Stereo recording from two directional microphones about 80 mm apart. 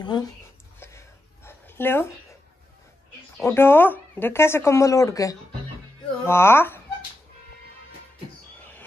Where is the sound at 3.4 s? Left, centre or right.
Left.